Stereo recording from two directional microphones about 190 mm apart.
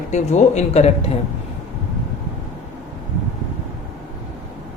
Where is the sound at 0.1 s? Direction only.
40° left (ahead or behind).